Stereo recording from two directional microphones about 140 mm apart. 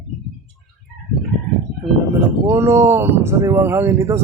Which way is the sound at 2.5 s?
20° right (ahead or behind).